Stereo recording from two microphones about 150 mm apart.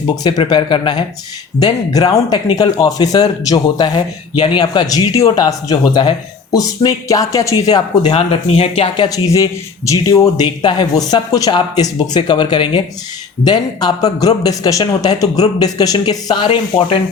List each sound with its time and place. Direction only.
0.2 s speech: 30° left (ahead or behind)
8.1 s speech: 40° left (ahead or behind)
9.0 s speech: 20° left (ahead or behind)